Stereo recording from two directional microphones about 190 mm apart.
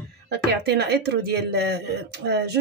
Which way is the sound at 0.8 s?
60° right (ahead or behind).